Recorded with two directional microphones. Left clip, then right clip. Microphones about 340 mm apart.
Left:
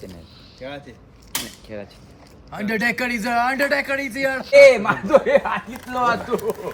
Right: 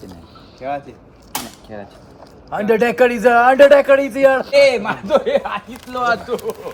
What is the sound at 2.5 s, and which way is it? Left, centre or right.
Speech, centre.